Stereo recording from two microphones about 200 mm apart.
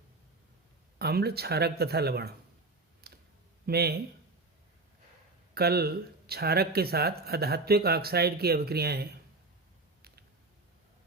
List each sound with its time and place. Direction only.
0.9 s speech: 50° right (ahead or behind)
3.0 s clicking: 50° right (ahead or behind)
3.7 s speech: 50° right (ahead or behind)
5.5 s speech: 50° right (ahead or behind)